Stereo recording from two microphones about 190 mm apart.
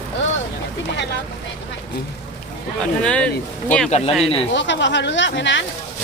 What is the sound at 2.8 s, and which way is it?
Speech, 5° left (ahead or behind).